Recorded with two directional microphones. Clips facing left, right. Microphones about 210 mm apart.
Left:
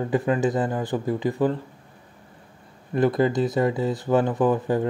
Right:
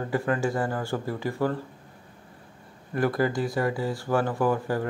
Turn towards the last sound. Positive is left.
turn(degrees=20)  # may be behind; listen again after turning